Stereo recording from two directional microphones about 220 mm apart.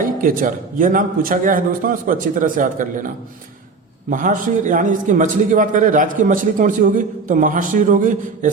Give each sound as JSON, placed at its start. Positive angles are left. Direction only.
{"t": 0.0, "sound": "a man's voice", "side_deg": -40}
{"t": 4.1, "sound": "a man's voice", "side_deg": -35}